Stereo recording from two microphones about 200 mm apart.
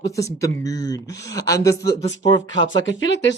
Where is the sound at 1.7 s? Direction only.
60° left (ahead or behind).